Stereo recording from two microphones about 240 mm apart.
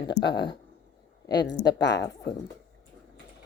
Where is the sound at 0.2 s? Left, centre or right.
Centre.